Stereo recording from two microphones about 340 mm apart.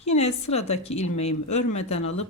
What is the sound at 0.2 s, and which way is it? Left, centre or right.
Speech, centre.